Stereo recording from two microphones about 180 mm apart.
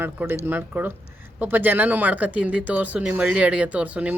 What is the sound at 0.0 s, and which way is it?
Speech, 10° right (ahead or behind).